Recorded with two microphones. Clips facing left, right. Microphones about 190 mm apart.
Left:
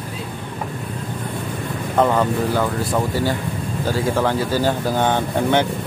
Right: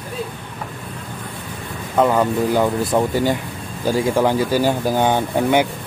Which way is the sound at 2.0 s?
5° right (ahead or behind).